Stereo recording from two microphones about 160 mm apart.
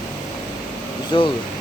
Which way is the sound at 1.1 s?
30° left (ahead or behind).